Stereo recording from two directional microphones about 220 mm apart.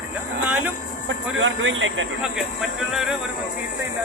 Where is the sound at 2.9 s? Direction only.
Centre (ahead or behind).